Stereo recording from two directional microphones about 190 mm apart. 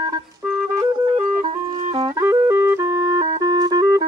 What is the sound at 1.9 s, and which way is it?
Music, 15° right (ahead or behind).